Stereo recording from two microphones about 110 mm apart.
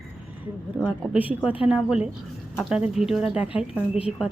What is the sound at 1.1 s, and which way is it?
Speech, 15° right (ahead or behind).